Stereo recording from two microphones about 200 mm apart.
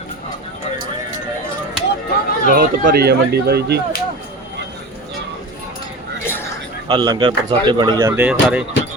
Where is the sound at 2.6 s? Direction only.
50° right (ahead or behind).